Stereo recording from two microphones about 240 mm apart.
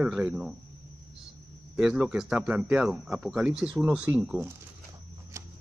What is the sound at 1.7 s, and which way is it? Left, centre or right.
Speech, centre.